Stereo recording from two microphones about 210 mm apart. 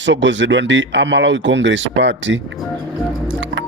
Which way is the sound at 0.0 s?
60° right (ahead or behind).